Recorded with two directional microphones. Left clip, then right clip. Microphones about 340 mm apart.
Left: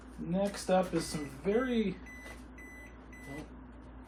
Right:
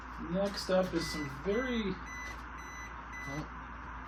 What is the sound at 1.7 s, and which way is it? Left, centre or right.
Speech, centre.